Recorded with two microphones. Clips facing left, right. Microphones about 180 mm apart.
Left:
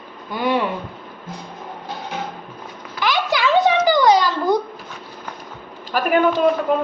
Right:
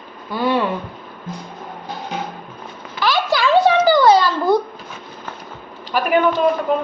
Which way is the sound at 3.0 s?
20° left (ahead or behind).